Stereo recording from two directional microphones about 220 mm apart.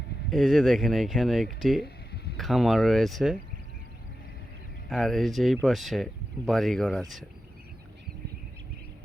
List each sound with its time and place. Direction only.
0.3 s speech: centre (ahead or behind)
1.8 s a sound: 45° left (ahead or behind)
2.4 s speech: centre (ahead or behind)
4.9 s speech: centre (ahead or behind)